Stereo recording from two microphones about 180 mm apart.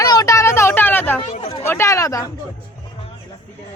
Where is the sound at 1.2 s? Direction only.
30° left (ahead or behind).